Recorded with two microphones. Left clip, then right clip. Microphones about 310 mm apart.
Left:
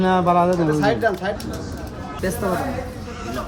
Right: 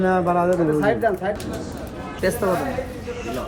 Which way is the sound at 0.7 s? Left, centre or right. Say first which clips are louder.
Even; left.